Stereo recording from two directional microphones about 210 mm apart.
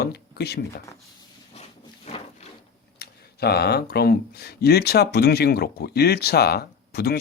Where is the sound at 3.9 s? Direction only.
50° left (ahead or behind).